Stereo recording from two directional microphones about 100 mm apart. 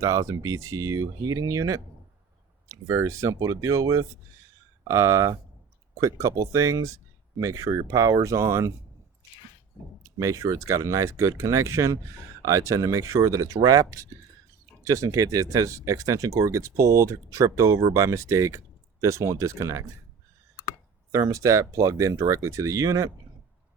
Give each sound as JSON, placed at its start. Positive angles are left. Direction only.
{"t": 0.0, "sound": "speech", "side_deg": -30}
{"t": 10.0, "sound": "speech", "side_deg": -30}
{"t": 21.1, "sound": "speech", "side_deg": -30}